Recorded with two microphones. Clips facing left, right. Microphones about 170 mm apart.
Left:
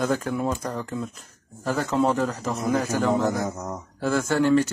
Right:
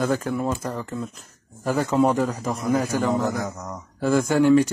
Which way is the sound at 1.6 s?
10° right (ahead or behind).